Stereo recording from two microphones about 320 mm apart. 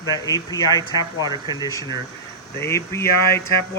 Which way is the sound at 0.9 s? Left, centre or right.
Centre.